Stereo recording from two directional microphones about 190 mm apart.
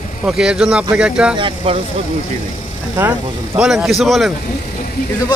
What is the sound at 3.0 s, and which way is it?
Speech, 5° right (ahead or behind).